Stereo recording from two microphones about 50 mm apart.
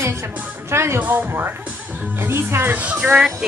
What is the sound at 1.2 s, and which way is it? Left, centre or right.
Speech, right.